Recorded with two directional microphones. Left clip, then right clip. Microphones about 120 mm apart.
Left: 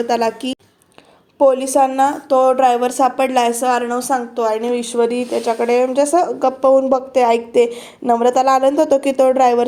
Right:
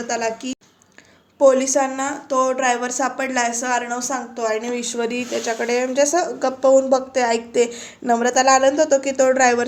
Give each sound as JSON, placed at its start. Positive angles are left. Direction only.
{"t": 0.1, "sound": "a woman's voice", "side_deg": 65}
{"t": 1.4, "sound": "speech", "side_deg": 35}